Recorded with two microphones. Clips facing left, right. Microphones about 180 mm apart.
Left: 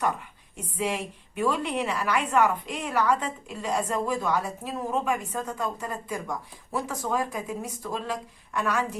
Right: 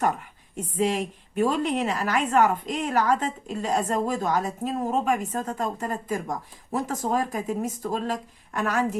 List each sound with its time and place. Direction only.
0.5 s a woman's voice: 45° right (ahead or behind)